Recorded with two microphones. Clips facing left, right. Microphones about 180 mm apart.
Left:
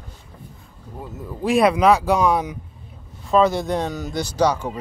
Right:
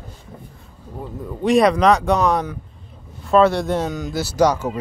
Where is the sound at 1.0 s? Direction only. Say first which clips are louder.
Right 2 dB; centre (ahead or behind).